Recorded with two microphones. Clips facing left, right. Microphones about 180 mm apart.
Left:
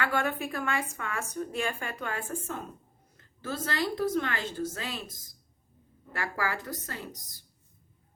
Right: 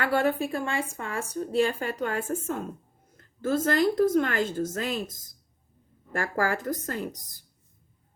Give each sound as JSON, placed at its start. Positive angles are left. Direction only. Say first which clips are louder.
{"t": 0.0, "sound": "a woman's voice", "louder": "right 5 dB", "side_deg": -35}
{"t": 3.4, "sound": "a woman's voice", "louder": "right 9 dB", "side_deg": -50}
{"t": 6.1, "sound": "a woman's voice", "louder": "right 6 dB", "side_deg": -45}